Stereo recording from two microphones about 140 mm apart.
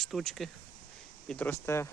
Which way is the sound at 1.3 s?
15° left (ahead or behind).